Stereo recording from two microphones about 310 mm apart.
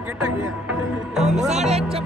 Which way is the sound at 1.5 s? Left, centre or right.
Right.